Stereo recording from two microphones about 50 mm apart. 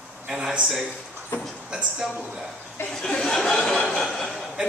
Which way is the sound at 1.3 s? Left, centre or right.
Left.